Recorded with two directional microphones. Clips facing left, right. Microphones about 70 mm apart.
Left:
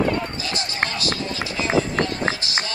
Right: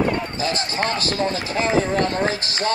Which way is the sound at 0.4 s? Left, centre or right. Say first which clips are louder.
Right 3 dB; right.